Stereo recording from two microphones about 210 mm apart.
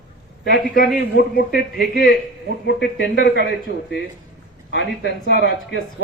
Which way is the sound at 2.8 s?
55° left (ahead or behind).